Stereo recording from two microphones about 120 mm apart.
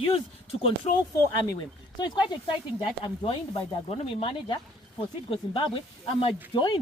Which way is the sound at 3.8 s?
55° left (ahead or behind).